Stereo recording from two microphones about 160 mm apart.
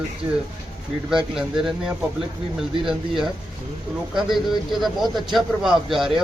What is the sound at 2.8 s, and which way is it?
A man's voice, 5° right (ahead or behind).